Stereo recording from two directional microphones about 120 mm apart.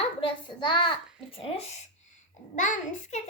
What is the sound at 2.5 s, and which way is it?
Speech, 90° left.